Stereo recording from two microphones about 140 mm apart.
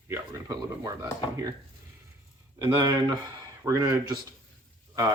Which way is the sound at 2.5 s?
25° right (ahead or behind).